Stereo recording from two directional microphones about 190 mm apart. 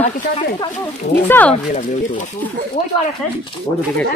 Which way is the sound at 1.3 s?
10° left (ahead or behind).